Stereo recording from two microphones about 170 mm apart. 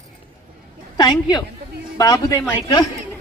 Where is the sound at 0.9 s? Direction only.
25° left (ahead or behind).